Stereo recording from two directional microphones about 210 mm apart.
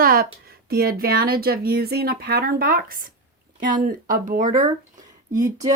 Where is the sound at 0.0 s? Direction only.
45° right (ahead or behind).